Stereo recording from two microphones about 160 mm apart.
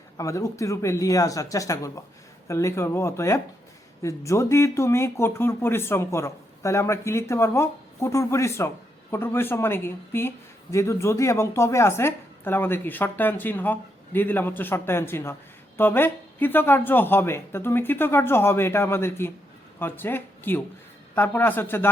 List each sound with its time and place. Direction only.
0.2 s speech: 20° left (ahead or behind)